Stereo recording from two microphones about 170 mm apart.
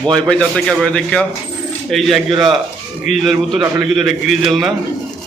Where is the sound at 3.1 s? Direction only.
45° left (ahead or behind).